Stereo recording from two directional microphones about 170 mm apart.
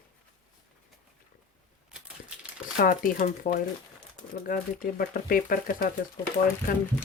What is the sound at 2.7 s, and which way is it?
Speech, 55° left (ahead or behind).